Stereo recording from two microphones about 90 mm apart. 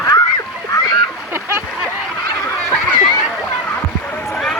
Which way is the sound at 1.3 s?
25° right (ahead or behind).